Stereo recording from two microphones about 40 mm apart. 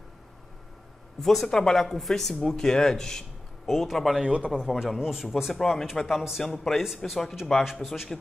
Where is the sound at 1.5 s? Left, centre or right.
Centre.